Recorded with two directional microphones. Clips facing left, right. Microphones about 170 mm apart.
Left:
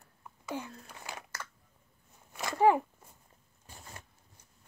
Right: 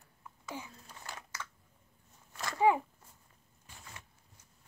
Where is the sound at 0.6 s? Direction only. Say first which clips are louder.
Left 5 dB; 65° left (ahead or behind).